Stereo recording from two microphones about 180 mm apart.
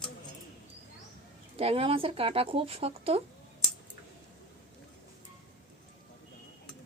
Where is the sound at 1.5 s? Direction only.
30° right (ahead or behind).